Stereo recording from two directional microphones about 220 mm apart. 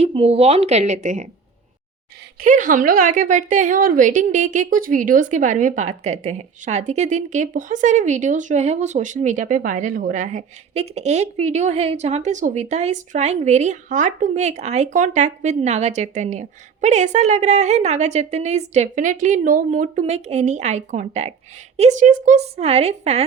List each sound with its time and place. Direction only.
0.0 s a woman's voice: 25° right (ahead or behind)
2.4 s a woman's voice: 35° right (ahead or behind)